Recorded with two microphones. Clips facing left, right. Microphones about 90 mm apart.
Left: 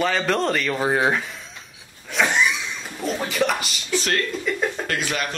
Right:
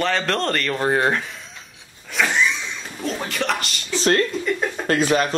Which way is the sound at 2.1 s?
Centre (ahead or behind).